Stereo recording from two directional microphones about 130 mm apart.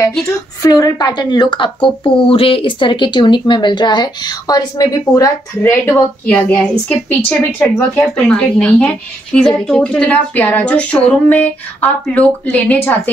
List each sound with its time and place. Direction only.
0.7 s speech: 30° left (ahead or behind)
5.6 s speech: 15° left (ahead or behind)